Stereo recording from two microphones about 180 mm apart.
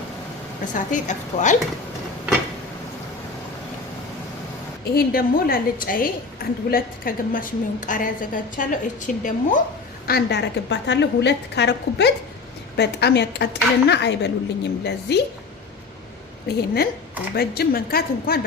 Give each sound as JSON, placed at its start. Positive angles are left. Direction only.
{"t": 0.7, "sound": "a woman's voice", "side_deg": 45}
{"t": 4.9, "sound": "a woman's voice", "side_deg": 55}
{"t": 10.1, "sound": "a woman's voice", "side_deg": 65}
{"t": 16.6, "sound": "a woman's voice", "side_deg": 60}